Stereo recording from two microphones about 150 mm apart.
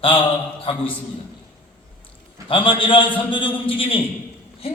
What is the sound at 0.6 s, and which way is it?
Speech, 35° left (ahead or behind).